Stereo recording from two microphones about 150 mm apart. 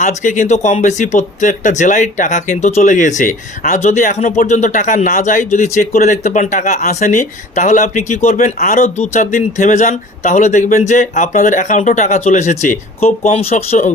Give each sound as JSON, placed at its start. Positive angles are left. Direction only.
{"t": 0.0, "sound": "speech", "side_deg": 55}
{"t": 8.5, "sound": "speech", "side_deg": 65}
{"t": 13.0, "sound": "speech", "side_deg": 45}